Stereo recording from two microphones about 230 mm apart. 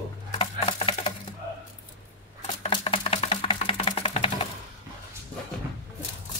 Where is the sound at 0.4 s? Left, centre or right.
Left.